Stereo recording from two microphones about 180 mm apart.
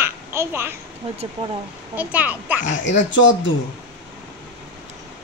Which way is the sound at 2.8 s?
90° left.